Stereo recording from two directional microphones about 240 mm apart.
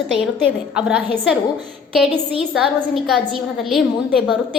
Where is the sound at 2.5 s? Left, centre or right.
Centre.